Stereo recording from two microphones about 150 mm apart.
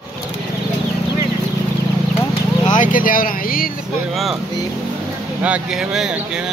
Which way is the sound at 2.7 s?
65° left (ahead or behind).